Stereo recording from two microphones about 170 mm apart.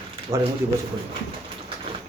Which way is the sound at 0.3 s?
35° right (ahead or behind).